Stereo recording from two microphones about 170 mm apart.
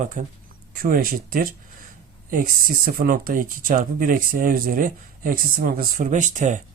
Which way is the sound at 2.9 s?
55° right (ahead or behind).